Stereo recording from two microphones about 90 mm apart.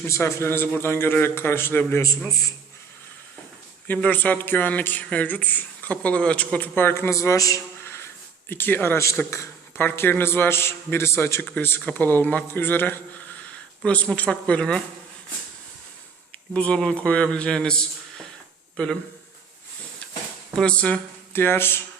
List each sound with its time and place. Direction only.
0.1 s a man's voice: 30° left (ahead or behind)
3.8 s a man's voice: 15° left (ahead or behind)
16.6 s a man's voice: 10° left (ahead or behind)
20.6 s a man's voice: 10° left (ahead or behind)
21.3 s a man's voice: 25° left (ahead or behind)